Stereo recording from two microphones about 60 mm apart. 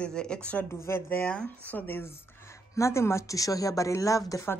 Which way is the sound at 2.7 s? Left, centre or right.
Left.